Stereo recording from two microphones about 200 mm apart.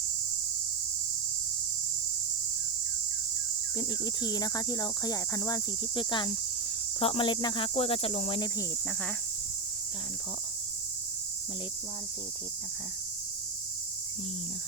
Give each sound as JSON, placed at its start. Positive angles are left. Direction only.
{"t": 3.8, "sound": "speech", "side_deg": 20}